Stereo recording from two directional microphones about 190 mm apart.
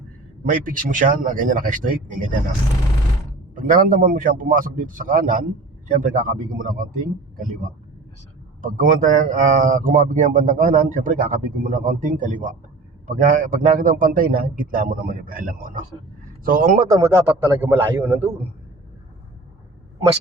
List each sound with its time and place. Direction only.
0.4 s a man's voice: 45° right (ahead or behind)
3.5 s a man's voice: 45° right (ahead or behind)
17.1 s a man's voice: 15° right (ahead or behind)